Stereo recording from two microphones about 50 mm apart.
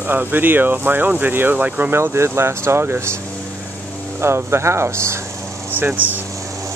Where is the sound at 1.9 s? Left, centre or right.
Right.